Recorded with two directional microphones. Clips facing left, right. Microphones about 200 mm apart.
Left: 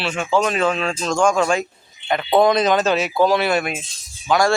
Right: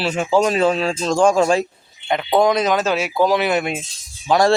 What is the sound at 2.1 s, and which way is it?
Speech, 15° right (ahead or behind).